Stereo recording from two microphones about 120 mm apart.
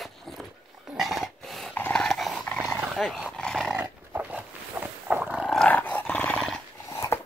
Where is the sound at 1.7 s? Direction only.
15° left (ahead or behind).